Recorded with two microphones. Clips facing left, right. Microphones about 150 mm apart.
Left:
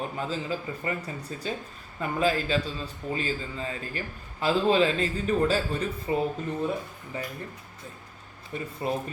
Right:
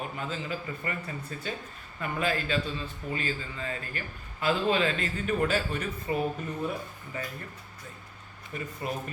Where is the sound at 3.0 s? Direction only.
30° left (ahead or behind).